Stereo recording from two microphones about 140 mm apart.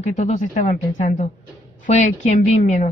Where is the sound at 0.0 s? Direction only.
60° left (ahead or behind).